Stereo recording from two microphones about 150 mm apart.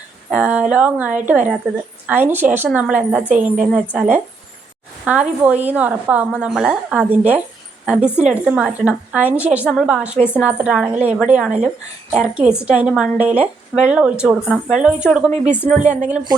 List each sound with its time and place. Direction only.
0.3 s a woman's voice: 5° right (ahead or behind)
15.8 s a woman's voice: 55° right (ahead or behind)